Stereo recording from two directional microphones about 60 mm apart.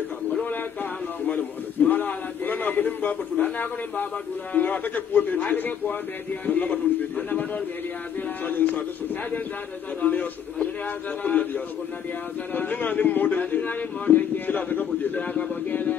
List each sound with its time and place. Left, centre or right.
0.3 s a sound: left
1.2 s a man's voice: left
10.0 s a man's voice: left